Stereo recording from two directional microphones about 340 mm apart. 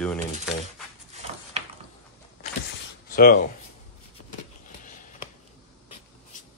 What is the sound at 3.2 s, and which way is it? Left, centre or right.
Speech, left.